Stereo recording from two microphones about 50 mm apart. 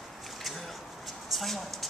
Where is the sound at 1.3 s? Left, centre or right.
Centre.